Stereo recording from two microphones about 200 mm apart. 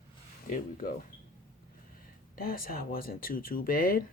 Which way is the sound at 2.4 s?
45° left (ahead or behind).